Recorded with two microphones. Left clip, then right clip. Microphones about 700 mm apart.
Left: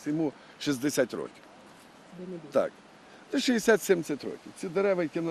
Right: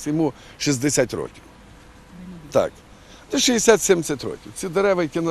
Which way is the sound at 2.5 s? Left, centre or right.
Right.